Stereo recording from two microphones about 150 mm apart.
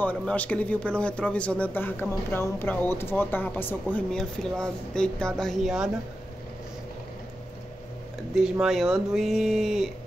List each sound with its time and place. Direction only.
0.0 s speech: 10° left (ahead or behind)
8.4 s speech: 5° right (ahead or behind)